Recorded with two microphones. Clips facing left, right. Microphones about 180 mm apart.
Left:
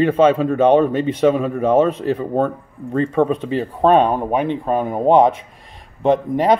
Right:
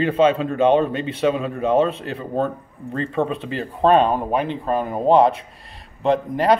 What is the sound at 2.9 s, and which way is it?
Speech, 15° left (ahead or behind).